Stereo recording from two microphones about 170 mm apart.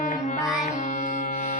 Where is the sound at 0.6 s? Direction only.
45° left (ahead or behind).